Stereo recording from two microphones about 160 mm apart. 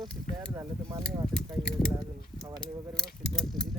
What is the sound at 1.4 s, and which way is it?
Speech, 5° left (ahead or behind).